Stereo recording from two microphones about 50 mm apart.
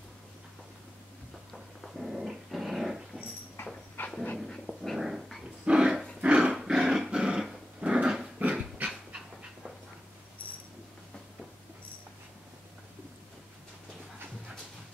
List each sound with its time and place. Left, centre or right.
1.5 s dog: centre
4.0 s dog: left
4.5 s dog: centre
4.9 s dog: centre
5.7 s dog: centre
6.5 s dog: centre
8.4 s dog: right